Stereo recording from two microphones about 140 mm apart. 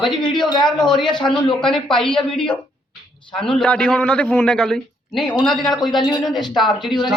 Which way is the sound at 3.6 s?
5° left (ahead or behind).